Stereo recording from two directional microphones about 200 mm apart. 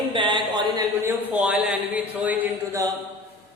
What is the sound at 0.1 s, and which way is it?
A man's voice, 25° right (ahead or behind).